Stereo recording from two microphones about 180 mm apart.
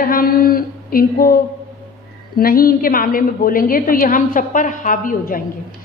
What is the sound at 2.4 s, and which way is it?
A woman's voice, 55° left (ahead or behind).